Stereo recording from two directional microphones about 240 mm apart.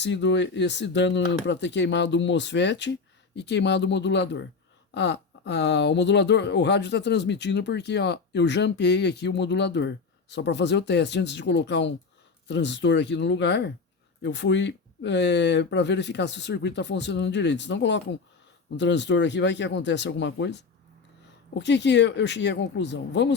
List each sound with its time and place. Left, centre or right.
0.0 s speech: left